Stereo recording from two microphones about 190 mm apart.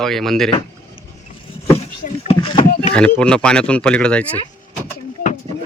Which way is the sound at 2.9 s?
5° left (ahead or behind).